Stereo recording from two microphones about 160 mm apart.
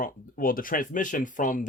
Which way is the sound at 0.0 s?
60° left (ahead or behind).